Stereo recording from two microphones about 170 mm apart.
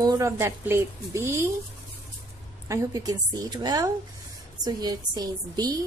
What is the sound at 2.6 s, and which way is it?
A woman's voice, 20° right (ahead or behind).